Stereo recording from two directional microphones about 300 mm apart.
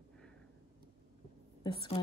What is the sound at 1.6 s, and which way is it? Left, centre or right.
Speech, centre.